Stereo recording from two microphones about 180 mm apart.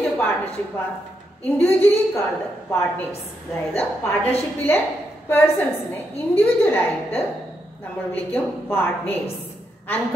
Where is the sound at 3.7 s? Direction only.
10° left (ahead or behind).